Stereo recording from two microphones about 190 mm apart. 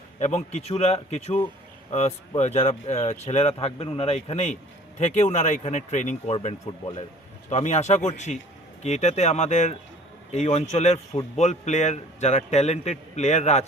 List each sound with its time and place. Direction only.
0.2 s speech: 40° left (ahead or behind)